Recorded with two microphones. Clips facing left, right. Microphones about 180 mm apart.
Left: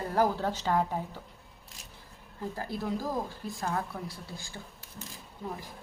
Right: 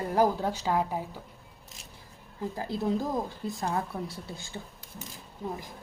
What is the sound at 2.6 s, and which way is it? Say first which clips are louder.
Speech: right 5 dB; 20° right (ahead or behind).